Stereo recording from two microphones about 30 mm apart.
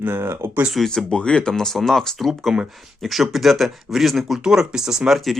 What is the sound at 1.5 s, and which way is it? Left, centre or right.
Speech, centre.